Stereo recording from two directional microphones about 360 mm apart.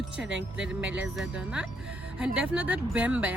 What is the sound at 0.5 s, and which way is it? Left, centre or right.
Speech, centre.